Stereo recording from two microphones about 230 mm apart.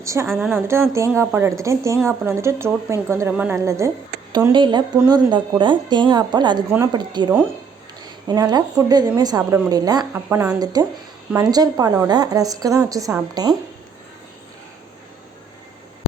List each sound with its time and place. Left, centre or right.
0.0 s a woman's voice: centre
8.3 s speech: centre